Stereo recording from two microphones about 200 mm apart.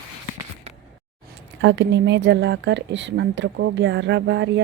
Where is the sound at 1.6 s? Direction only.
60° right (ahead or behind).